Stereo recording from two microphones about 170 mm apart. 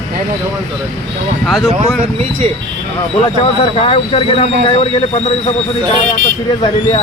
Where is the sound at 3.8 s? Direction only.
30° left (ahead or behind).